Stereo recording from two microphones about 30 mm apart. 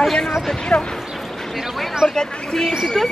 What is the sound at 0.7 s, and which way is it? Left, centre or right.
Speech, left.